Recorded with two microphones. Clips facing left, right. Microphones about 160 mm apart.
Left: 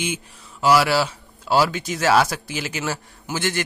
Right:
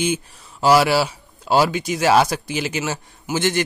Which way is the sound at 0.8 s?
15° right (ahead or behind).